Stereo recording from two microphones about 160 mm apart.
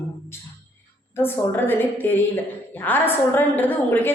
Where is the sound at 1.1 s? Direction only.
15° left (ahead or behind).